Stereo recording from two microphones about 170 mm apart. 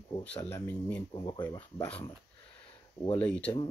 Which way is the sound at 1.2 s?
25° left (ahead or behind).